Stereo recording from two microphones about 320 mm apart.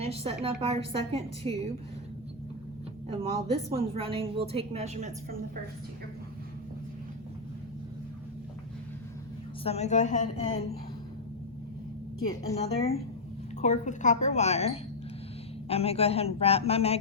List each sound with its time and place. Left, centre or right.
0.0 s a woman's voice: centre
3.2 s a woman's voice: centre
9.6 s a man's voice: centre
12.3 s a woman's voice: centre